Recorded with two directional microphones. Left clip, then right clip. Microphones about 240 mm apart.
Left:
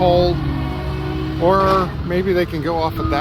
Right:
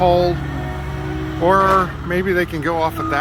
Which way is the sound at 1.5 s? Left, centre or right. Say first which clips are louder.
Right 1 dB; centre.